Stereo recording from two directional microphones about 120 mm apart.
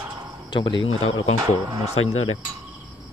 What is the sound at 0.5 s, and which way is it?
Speech, 40° left (ahead or behind).